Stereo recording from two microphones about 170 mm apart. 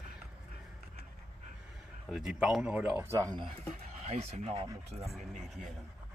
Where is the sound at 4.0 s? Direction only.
40° right (ahead or behind).